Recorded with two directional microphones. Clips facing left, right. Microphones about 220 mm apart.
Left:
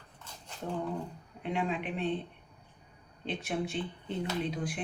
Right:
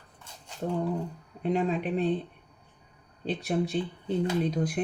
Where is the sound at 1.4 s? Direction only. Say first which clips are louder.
Right 6 dB; 40° right (ahead or behind).